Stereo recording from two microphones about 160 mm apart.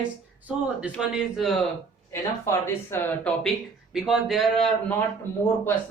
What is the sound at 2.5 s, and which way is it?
Speech, 15° left (ahead or behind).